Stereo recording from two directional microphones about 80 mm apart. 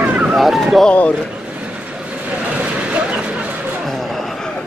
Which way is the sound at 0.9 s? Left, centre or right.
Centre.